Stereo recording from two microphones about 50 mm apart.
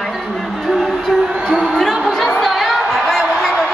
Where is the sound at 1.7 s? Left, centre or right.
Centre.